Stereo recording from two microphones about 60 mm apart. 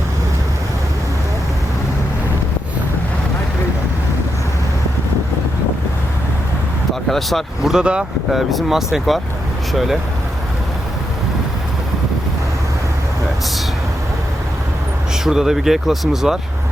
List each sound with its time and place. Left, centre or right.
7.1 s speech: centre
7.8 s speech: centre
8.3 s speech: centre
15.2 s speech: centre